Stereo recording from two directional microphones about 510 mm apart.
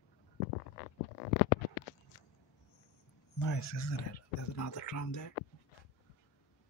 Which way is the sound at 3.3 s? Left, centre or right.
Left.